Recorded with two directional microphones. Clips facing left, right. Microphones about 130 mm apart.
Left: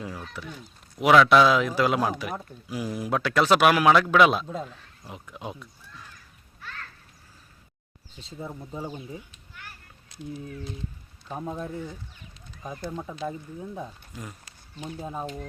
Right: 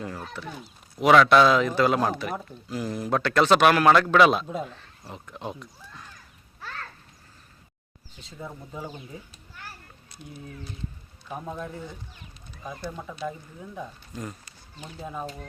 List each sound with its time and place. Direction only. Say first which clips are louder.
0.4 s speech: right 2 dB; 5° left (ahead or behind)
4.4 s a man's voice: right 2 dB; 10° right (ahead or behind)
5.0 s speech: right 1 dB; 10° left (ahead or behind)
8.2 s speech: left 2 dB; 25° left (ahead or behind)
9.6 s a sound: right 3 dB; 35° right (ahead or behind)
10.1 s a sound: left 6 dB; 90° left
11.3 s a man's voice: left 1 dB; 10° right (ahead or behind)
12.6 s speech: left 1 dB; 25° left (ahead or behind)
14.1 s speech: right 4 dB; 5° left (ahead or behind)
14.8 s speech: left 2 dB; 25° left (ahead or behind)